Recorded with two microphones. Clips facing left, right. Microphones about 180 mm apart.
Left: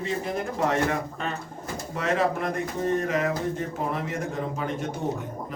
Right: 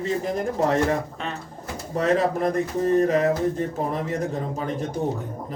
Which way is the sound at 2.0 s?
40° right (ahead or behind).